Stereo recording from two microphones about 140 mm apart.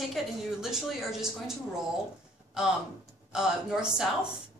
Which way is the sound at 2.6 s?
5° right (ahead or behind).